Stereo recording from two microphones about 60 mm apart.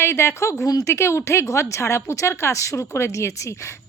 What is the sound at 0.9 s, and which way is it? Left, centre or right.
A woman's voice, left.